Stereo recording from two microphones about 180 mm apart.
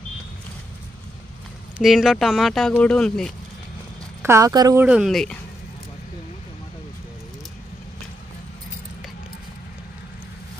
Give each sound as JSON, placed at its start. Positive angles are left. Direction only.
{"t": 1.8, "sound": "speech", "side_deg": 0}
{"t": 4.2, "sound": "speech", "side_deg": -15}
{"t": 4.8, "sound": "speech", "side_deg": 0}